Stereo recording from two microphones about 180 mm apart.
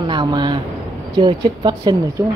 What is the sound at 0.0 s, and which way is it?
Speech, 25° right (ahead or behind).